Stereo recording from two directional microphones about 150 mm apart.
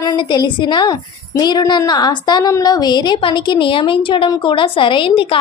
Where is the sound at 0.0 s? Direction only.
30° left (ahead or behind).